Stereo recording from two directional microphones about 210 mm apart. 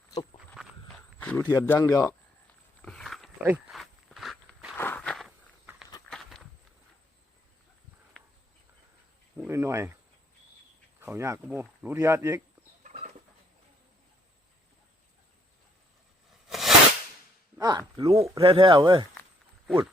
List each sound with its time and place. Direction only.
0.3 s walk: centre (ahead or behind)
1.5 s a man's voice: 10° left (ahead or behind)
2.8 s walk: centre (ahead or behind)
9.4 s speech: 15° right (ahead or behind)
11.0 s speech: 10° right (ahead or behind)
12.8 s bird: 35° right (ahead or behind)
16.5 s a sound: centre (ahead or behind)
17.6 s speech: 20° right (ahead or behind)
19.6 s speech: centre (ahead or behind)